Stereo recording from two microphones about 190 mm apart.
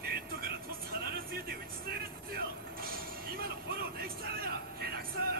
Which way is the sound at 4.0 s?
55° right (ahead or behind).